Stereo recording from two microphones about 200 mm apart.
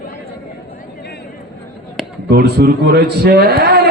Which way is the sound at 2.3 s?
55° right (ahead or behind).